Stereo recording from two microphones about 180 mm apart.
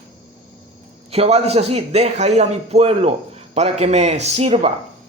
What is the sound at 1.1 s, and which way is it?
A man's voice, 35° right (ahead or behind).